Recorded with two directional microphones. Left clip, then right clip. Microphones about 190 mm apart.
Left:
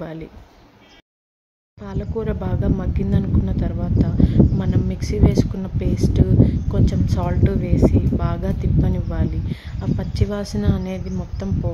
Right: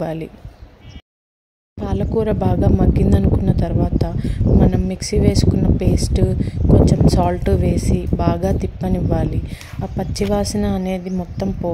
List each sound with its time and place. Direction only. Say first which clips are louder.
0.0 s speech: right 8 dB; 20° right (ahead or behind)
1.8 s speech: right 7 dB; 25° right (ahead or behind)